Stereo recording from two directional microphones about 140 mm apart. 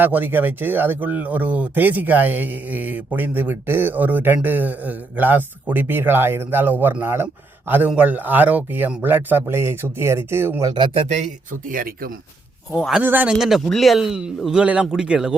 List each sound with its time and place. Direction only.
0.0 s speech: 15° right (ahead or behind)
11.7 s speech: 90° right
12.7 s a man's voice: centre (ahead or behind)
13.0 s a man's voice: 15° right (ahead or behind)